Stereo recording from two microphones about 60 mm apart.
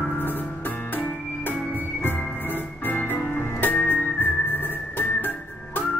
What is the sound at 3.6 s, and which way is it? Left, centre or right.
Music, left.